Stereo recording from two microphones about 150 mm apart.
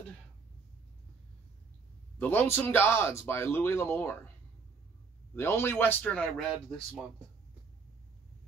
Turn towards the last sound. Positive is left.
turn(degrees=5)  # may be behind; listen again after turning